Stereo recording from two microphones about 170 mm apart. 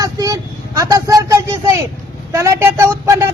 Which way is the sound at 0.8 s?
20° right (ahead or behind).